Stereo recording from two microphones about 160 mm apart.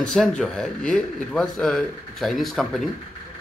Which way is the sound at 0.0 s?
5° left (ahead or behind).